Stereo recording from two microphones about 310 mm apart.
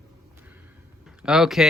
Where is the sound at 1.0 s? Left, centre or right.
Centre.